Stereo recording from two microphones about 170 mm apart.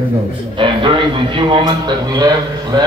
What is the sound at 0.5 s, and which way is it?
A man's voice, 30° right (ahead or behind).